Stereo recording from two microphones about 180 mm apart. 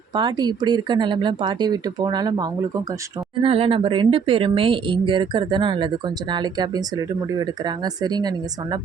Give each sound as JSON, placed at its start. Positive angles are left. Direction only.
{"t": 0.1, "sound": "speech", "side_deg": -25}